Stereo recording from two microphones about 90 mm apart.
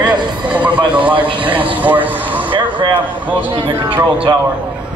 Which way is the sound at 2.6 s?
60° right (ahead or behind).